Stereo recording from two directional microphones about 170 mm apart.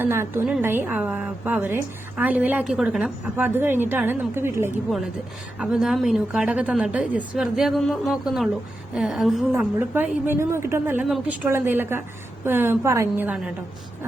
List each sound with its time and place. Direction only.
0.0 s a woman's voice: 15° right (ahead or behind)
5.5 s a woman's voice: 5° right (ahead or behind)